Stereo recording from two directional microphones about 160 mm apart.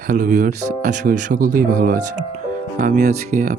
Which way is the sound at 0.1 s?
50° right (ahead or behind).